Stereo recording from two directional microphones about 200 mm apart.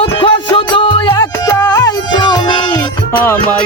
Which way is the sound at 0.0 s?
25° left (ahead or behind).